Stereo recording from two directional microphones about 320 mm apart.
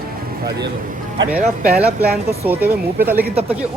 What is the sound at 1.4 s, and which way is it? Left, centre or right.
Speech, right.